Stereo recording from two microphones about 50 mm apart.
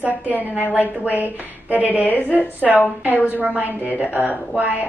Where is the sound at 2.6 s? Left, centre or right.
Centre.